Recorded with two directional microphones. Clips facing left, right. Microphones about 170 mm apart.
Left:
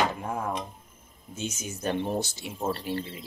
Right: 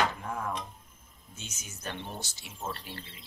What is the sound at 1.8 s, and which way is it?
Speech, 30° left (ahead or behind).